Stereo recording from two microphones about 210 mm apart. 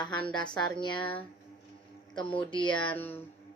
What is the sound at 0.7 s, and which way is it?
Speech, 20° left (ahead or behind).